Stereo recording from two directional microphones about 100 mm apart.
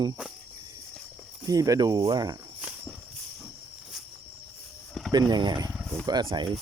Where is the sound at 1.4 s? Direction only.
35° right (ahead or behind).